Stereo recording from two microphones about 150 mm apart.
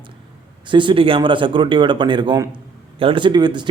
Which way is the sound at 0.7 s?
35° right (ahead or behind).